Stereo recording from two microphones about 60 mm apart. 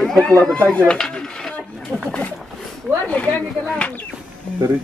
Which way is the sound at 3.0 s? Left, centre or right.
Left.